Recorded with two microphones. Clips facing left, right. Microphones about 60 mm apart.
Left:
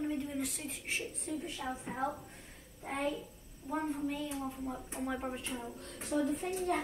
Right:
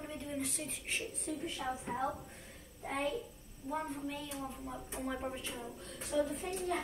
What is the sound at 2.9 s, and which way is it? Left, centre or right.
Speech, left.